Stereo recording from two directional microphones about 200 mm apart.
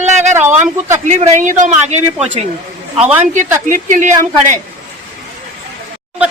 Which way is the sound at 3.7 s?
40° right (ahead or behind).